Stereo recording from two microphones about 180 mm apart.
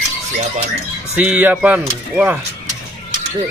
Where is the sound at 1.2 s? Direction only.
10° right (ahead or behind).